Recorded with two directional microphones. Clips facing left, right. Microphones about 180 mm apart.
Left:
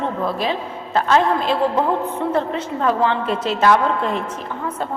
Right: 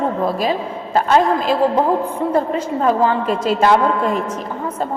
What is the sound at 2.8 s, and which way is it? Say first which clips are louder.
Speech: right 2 dB; 35° right (ahead or behind).